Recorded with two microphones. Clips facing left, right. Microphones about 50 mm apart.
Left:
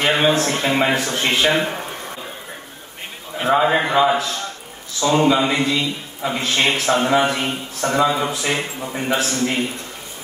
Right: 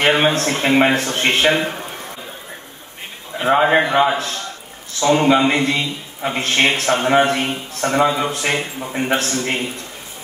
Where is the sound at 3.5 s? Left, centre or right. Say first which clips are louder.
Right 2 dB; right.